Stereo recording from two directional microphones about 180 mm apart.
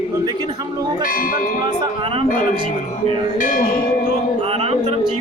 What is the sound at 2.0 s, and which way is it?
Speech, 35° right (ahead or behind).